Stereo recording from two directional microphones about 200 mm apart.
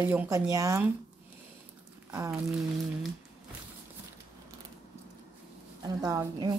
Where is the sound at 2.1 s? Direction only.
15° right (ahead or behind).